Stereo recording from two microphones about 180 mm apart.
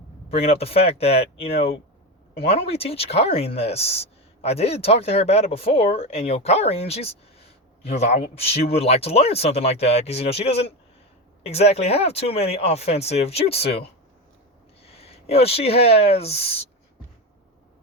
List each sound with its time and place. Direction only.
0.3 s speech: 35° left (ahead or behind)
14.8 s speech: 35° left (ahead or behind)